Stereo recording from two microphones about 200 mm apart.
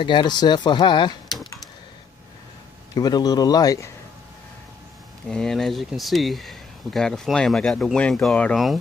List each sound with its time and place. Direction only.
0.0 s speech: 25° left (ahead or behind)
2.9 s speech: 20° left (ahead or behind)
5.3 s speech: centre (ahead or behind)